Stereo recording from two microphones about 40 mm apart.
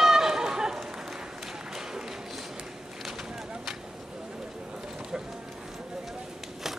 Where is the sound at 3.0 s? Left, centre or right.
Centre.